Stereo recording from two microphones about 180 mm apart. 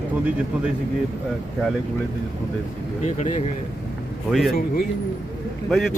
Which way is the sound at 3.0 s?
40° left (ahead or behind).